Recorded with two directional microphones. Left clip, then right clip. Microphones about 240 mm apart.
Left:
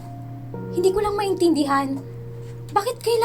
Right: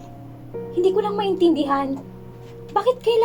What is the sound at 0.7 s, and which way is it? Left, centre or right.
Speech, left.